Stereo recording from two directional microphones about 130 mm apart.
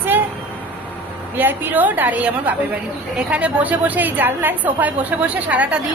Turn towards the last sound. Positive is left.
turn(degrees=-10)  # may be behind; listen again after turning